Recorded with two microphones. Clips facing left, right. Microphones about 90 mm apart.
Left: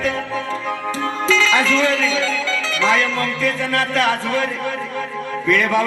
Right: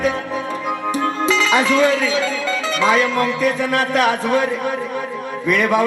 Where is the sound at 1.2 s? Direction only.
15° right (ahead or behind).